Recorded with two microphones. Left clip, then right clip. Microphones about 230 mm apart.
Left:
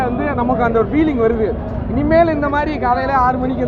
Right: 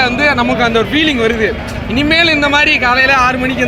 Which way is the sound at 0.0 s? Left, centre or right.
Right.